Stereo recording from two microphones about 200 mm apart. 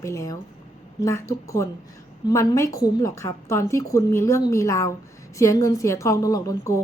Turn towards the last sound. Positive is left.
turn(degrees=15)  # may be behind; listen again after turning